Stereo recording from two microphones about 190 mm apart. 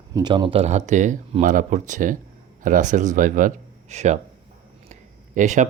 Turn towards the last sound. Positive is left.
turn(degrees=-40)  # may be behind; listen again after turning